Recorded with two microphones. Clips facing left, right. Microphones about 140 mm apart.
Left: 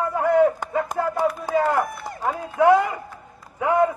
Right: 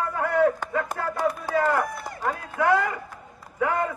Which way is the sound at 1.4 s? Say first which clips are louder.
Left 1 dB; 20° left (ahead or behind).